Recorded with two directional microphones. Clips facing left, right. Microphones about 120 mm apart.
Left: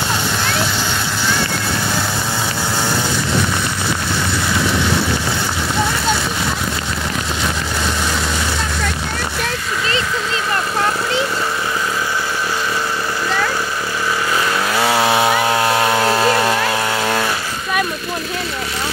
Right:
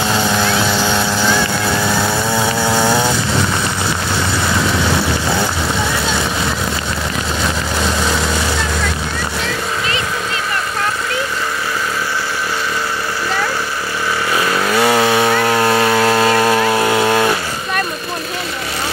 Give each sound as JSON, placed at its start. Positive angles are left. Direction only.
{"t": 14.8, "sound": "chainsaw", "side_deg": 5}
{"t": 16.9, "sound": "vehicle", "side_deg": -15}